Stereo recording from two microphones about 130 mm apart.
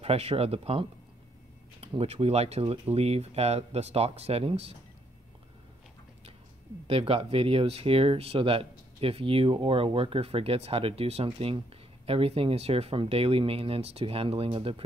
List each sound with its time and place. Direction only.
0.0 s speech: 50° right (ahead or behind)
6.9 s speech: 50° right (ahead or behind)